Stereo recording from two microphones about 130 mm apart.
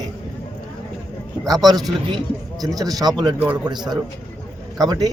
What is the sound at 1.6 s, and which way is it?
A man's voice, 30° right (ahead or behind).